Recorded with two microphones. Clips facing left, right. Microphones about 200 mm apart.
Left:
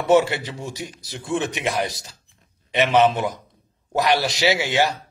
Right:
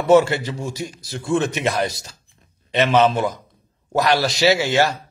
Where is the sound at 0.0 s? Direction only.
15° left (ahead or behind).